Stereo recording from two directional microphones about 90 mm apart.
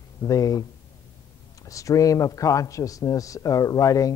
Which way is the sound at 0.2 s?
40° left (ahead or behind).